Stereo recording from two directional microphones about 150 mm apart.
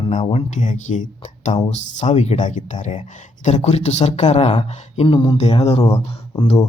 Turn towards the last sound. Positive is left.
turn(degrees=30)  # may be behind; listen again after turning